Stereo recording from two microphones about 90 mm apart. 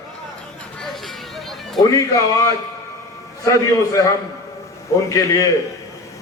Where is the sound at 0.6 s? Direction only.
5° left (ahead or behind).